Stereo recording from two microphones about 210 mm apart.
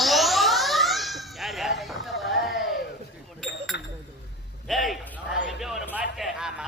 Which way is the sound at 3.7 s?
55° left (ahead or behind).